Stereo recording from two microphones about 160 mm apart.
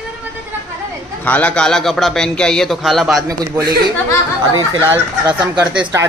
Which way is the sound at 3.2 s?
20° right (ahead or behind).